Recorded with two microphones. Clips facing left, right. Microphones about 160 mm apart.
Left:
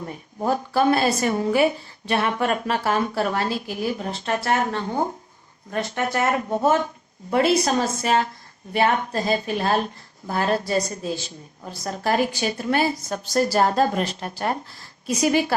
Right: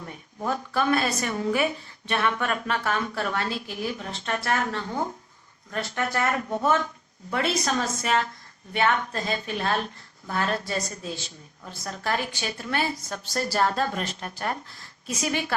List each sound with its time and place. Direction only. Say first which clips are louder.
0.0 s a woman's voice: left 5 dB; 35° left (ahead or behind)